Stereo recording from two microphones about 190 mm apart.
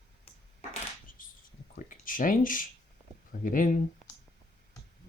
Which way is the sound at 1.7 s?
45° left (ahead or behind).